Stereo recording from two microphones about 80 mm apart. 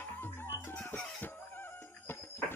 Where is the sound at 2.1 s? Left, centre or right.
Left.